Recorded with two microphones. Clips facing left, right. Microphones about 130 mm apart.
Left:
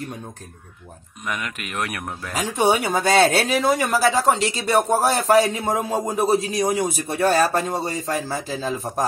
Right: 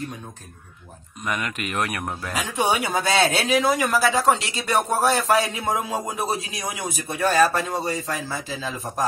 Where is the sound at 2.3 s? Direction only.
40° left (ahead or behind).